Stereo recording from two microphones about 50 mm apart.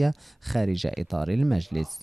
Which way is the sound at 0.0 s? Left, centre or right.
Centre.